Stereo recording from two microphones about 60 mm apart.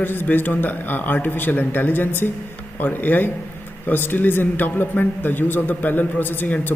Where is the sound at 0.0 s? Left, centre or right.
Left.